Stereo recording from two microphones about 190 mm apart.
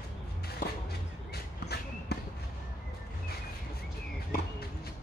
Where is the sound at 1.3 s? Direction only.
60° left (ahead or behind).